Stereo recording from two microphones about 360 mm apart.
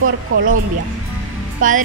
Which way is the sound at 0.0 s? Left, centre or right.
Right.